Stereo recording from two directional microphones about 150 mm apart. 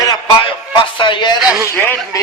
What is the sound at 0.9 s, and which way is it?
Speech, 30° left (ahead or behind).